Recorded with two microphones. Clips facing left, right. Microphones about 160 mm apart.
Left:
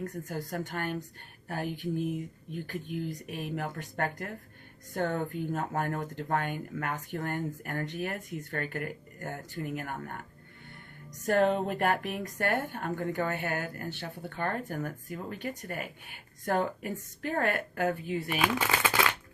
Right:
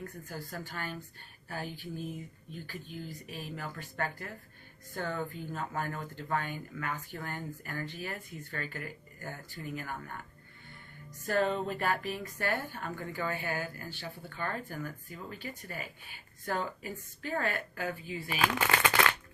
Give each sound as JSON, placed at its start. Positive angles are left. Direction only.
{"t": 0.3, "sound": "speech", "side_deg": 60}
{"t": 11.3, "sound": "speech", "side_deg": 55}
{"t": 18.3, "sound": "speech", "side_deg": 10}